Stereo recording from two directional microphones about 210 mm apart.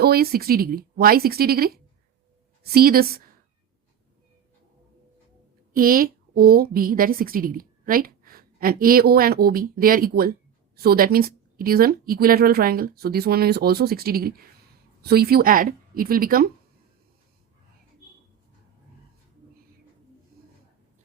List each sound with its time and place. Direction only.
0.0 s a woman's voice: 45° right (ahead or behind)
5.7 s a woman's voice: 40° right (ahead or behind)
20.3 s a sound: 45° right (ahead or behind)